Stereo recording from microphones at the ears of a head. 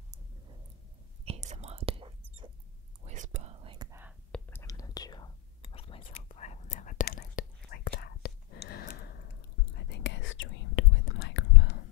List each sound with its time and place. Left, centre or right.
1.2 s whispering: right
4.6 s whispering: left